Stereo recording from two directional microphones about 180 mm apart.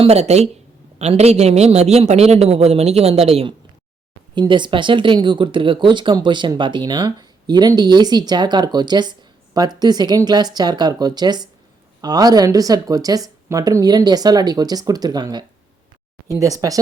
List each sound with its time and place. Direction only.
0.0 s a man's voice: 35° right (ahead or behind); by 16.8 s 20° right (ahead or behind)